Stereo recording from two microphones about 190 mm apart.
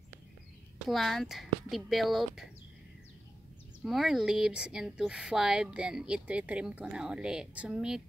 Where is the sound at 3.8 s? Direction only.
Centre (ahead or behind).